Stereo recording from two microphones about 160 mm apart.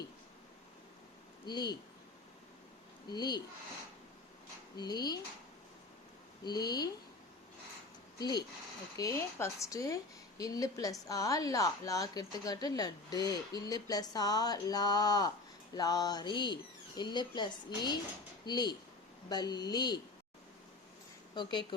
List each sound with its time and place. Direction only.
1.5 s a woman's voice: 25° left (ahead or behind)
3.1 s a woman's voice: 25° left (ahead or behind)
4.8 s a woman's voice: 25° left (ahead or behind)
6.4 s a woman's voice: 25° left (ahead or behind)
8.2 s a woman's voice: 25° left (ahead or behind)